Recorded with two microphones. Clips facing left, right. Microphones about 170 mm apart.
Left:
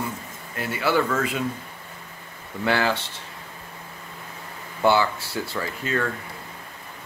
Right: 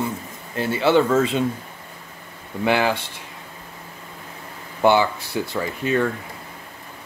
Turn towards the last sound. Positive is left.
turn(degrees=-15)  # may be behind; listen again after turning